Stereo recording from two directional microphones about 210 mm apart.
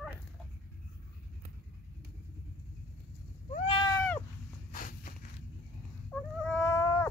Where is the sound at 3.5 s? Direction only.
25° left (ahead or behind).